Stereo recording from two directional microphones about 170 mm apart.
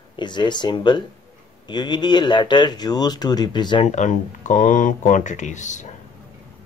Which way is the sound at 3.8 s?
45° left (ahead or behind).